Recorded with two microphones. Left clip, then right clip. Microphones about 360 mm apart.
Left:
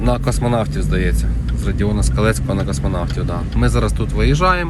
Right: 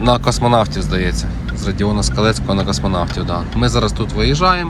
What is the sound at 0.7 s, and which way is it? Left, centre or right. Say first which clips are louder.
Speech: right 2 dB; centre.